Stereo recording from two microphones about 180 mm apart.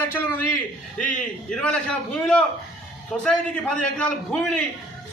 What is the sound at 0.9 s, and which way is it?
A man's voice, 5° left (ahead or behind).